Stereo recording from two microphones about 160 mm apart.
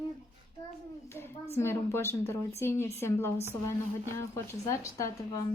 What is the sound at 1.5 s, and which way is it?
A woman's voice, 15° left (ahead or behind).